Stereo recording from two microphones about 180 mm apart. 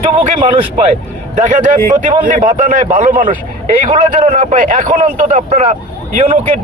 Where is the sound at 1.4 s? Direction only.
45° right (ahead or behind).